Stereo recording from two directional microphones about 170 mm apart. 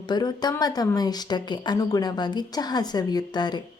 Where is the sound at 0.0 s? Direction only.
25° left (ahead or behind).